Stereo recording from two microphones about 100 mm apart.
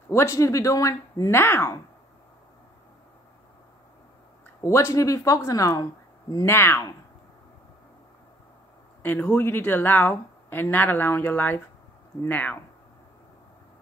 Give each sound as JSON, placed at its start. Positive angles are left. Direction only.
{"t": 0.1, "sound": "speech", "side_deg": 30}
{"t": 4.6, "sound": "speech", "side_deg": 30}
{"t": 9.0, "sound": "speech", "side_deg": 20}